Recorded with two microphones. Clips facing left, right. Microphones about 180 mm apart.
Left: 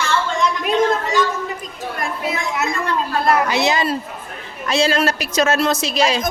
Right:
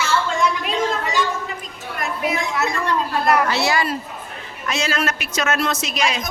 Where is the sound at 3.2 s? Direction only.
20° left (ahead or behind).